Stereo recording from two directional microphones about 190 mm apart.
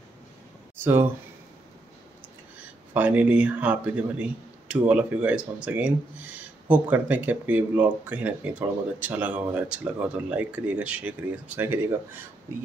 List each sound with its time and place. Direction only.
2.9 s speech: 10° right (ahead or behind)